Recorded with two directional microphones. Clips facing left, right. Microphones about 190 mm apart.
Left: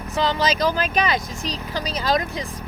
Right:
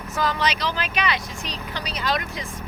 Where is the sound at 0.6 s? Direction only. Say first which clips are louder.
Left 5 dB; 45° left (ahead or behind).